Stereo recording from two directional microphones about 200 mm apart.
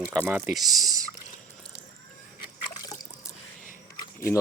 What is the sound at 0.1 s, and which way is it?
Speech, 5° left (ahead or behind).